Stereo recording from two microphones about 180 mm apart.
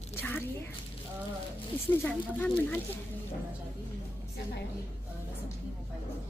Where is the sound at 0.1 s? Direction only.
10° left (ahead or behind).